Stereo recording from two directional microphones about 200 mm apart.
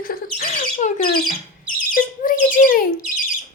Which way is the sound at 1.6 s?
45° left (ahead or behind).